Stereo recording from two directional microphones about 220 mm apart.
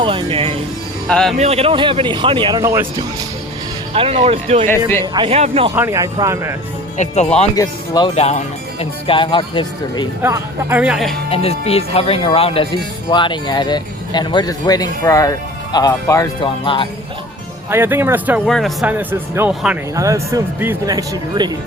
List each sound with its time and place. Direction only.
0.0 s speech: 25° right (ahead or behind)
1.0 s speech: 5° left (ahead or behind)
1.4 s speech: 30° right (ahead or behind)
3.9 s speech: 25° right (ahead or behind)
5.7 s speech: 10° right (ahead or behind)
6.9 s speech: 30° left (ahead or behind)
7.5 s speech: 15° left (ahead or behind)
10.2 s speech: 10° right (ahead or behind)
11.3 s speech: 25° left (ahead or behind)
17.7 s speech: 10° right (ahead or behind)